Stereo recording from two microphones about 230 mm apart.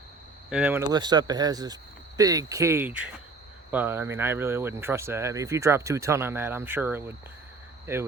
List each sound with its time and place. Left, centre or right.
0.5 s speech: centre